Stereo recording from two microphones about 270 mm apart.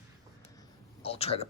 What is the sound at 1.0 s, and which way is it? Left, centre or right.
Speech, left.